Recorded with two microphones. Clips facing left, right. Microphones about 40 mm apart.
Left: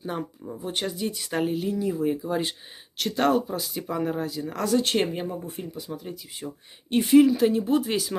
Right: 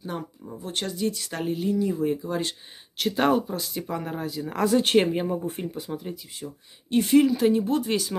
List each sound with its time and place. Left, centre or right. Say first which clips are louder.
0.0 s speech: left 2 dB; centre
3.0 s speech: even; centre
5.6 s speech: right 3 dB; right
6.4 s speech: left 2 dB; left
7.0 s speech: left 2 dB; centre